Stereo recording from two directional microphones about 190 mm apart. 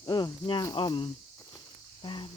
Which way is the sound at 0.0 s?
20° left (ahead or behind).